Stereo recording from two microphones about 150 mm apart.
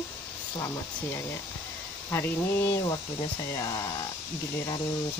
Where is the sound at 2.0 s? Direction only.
15° left (ahead or behind).